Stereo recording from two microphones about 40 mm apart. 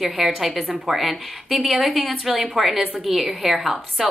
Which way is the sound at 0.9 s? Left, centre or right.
Centre.